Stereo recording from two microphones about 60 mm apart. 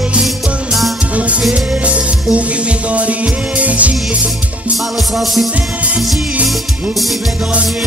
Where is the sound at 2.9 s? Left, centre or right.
Right.